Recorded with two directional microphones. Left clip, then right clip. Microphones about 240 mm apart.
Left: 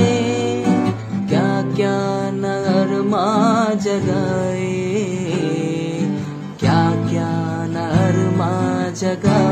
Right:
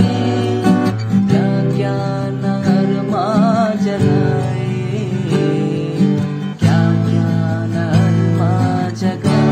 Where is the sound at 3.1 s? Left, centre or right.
Left.